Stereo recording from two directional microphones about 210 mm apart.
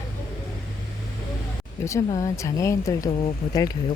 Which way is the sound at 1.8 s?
15° left (ahead or behind).